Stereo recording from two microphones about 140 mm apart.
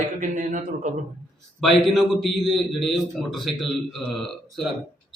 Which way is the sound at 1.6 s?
Centre (ahead or behind).